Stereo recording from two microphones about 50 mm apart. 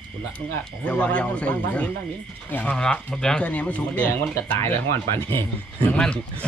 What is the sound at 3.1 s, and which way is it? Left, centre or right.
Speech, centre.